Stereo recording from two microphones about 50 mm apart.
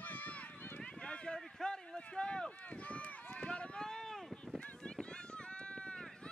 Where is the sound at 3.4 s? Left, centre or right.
Left.